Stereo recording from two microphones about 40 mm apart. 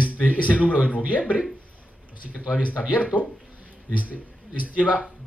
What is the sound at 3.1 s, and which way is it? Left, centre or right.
Speech, right.